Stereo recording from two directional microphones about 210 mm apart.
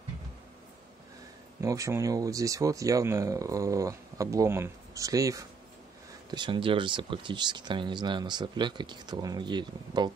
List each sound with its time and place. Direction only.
1.6 s speech: 15° right (ahead or behind)